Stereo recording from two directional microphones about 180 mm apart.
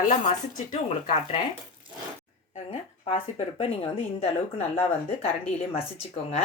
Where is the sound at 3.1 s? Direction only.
30° left (ahead or behind).